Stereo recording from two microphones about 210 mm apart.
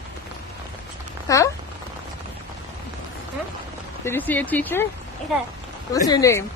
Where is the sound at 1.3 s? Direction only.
15° left (ahead or behind).